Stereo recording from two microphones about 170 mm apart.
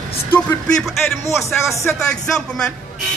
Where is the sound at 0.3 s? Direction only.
10° left (ahead or behind).